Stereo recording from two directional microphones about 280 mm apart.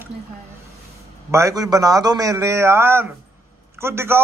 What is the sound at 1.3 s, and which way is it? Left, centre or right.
A man's voice, centre.